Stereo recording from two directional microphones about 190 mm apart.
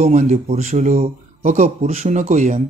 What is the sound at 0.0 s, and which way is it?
Speech, 40° right (ahead or behind).